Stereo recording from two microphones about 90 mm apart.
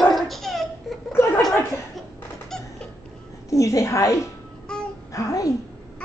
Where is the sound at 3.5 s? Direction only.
35° left (ahead or behind).